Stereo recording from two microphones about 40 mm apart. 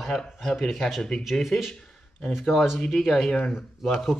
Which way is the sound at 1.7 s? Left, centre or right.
Centre.